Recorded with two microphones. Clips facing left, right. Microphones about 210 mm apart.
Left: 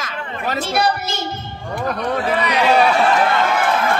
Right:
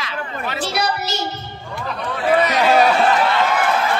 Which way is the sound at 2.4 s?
40° right (ahead or behind).